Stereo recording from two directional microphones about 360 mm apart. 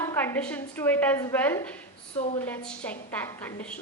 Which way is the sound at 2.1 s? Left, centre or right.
Centre.